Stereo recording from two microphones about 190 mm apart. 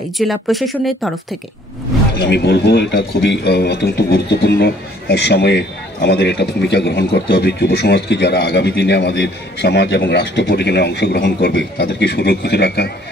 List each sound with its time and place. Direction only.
0.2 s speech: centre (ahead or behind)
2.1 s a man's voice: 65° left (ahead or behind)